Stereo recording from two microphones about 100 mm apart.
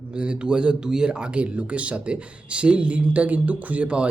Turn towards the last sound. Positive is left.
turn(degrees=-10)  # may be behind; listen again after turning